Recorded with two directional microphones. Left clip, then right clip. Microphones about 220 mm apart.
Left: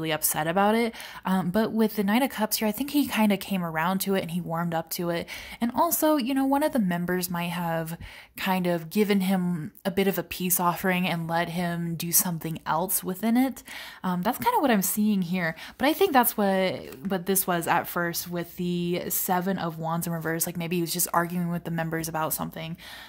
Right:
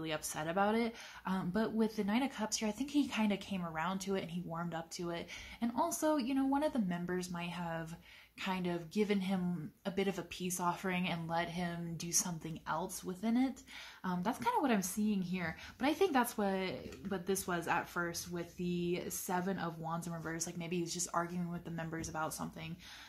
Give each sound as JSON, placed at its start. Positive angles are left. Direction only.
{"t": 0.0, "sound": "a woman's voice", "side_deg": 45}